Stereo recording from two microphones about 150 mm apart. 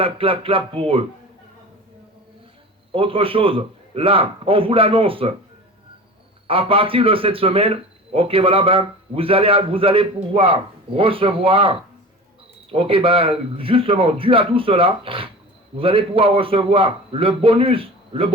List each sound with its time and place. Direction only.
0.0 s a man's voice: 40° right (ahead or behind)
2.9 s a man's voice: 35° right (ahead or behind)
6.5 s a man's voice: 35° right (ahead or behind)